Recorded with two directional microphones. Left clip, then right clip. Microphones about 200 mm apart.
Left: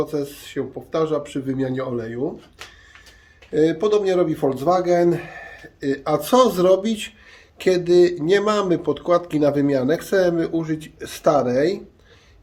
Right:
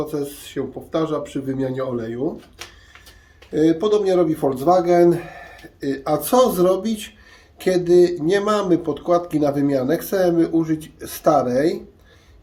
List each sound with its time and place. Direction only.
0.0 s speech: 15° left (ahead or behind)
3.5 s speech: 15° left (ahead or behind)